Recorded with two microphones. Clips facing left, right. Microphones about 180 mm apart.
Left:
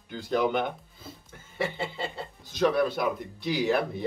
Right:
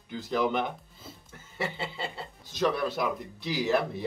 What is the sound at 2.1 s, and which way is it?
Speech, centre (ahead or behind).